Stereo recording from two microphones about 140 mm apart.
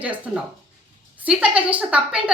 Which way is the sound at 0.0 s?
10° right (ahead or behind).